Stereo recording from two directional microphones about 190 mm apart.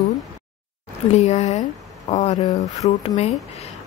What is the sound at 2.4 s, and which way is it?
Speech, 20° left (ahead or behind).